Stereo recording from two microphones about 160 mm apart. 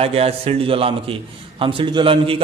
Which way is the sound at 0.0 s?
40° right (ahead or behind).